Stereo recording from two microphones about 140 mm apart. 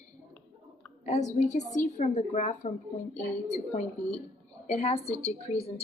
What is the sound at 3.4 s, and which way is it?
A woman's voice, 50° left (ahead or behind).